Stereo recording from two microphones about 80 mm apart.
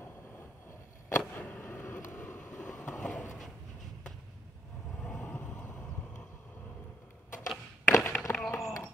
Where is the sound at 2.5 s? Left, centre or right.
Left.